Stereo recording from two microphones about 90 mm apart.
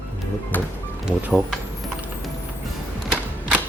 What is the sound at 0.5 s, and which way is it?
Music, 20° left (ahead or behind).